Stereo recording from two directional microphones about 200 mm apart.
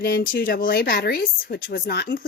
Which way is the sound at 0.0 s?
50° left (ahead or behind).